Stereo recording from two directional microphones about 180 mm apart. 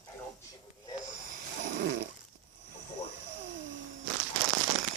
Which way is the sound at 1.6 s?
45° right (ahead or behind).